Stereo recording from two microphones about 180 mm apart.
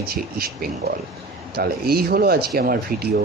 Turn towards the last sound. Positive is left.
turn(degrees=-55)  # may be behind; listen again after turning